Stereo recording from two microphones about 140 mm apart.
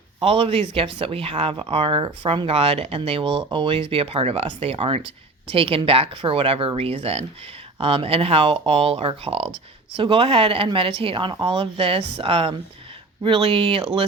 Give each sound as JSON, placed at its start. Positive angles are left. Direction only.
{"t": 0.2, "sound": "speech", "side_deg": -40}